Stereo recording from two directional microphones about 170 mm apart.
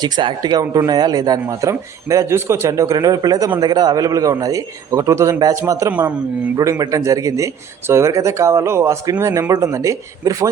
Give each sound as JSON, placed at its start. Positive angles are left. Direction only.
{"t": 0.0, "sound": "speech", "side_deg": -25}